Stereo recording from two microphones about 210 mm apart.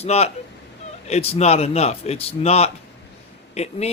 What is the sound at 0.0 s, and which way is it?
A man's voice, 30° left (ahead or behind).